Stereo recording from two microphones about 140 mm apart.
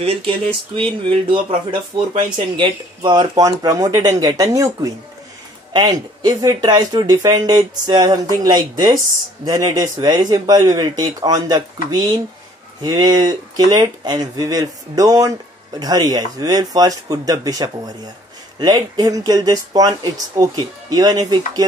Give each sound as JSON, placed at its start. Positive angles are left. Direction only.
{"t": 0.0, "sound": "speech", "side_deg": -45}